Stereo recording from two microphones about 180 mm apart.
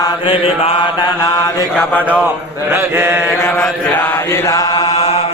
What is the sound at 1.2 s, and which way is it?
Mantra, 20° left (ahead or behind).